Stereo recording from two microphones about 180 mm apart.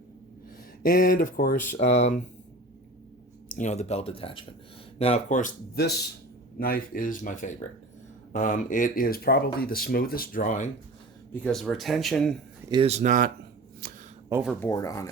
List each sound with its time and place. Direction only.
0.8 s speech: 50° left (ahead or behind)
1.7 s speech: 40° left (ahead or behind)
3.5 s speech: 40° left (ahead or behind)
5.7 s speech: 65° left (ahead or behind); by 10.7 s 45° left (ahead or behind)
11.3 s speech: 5° left (ahead or behind)
12.7 s speech: 35° right (ahead or behind)
13.8 s a sound: 55° right (ahead or behind)
14.6 s speech: 20° left (ahead or behind)